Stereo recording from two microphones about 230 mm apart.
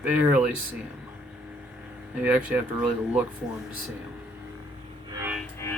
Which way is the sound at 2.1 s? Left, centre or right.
Centre.